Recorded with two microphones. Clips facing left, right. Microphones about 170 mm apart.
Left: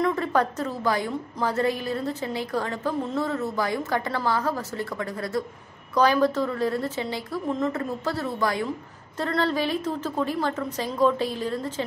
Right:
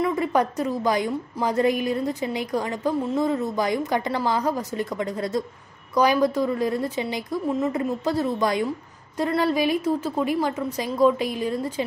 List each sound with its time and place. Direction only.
0.0 s a woman's voice: 10° right (ahead or behind)